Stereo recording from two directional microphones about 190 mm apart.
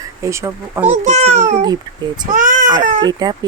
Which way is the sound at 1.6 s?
20° right (ahead or behind).